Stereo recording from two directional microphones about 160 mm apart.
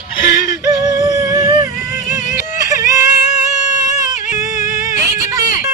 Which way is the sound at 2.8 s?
20° right (ahead or behind).